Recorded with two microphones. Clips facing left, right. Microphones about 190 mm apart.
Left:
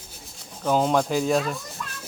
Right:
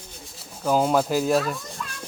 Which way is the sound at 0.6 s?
5° right (ahead or behind).